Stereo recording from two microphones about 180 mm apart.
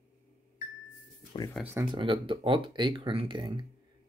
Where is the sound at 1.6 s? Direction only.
10° right (ahead or behind).